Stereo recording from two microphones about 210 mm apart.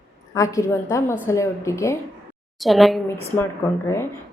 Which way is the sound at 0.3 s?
15° left (ahead or behind).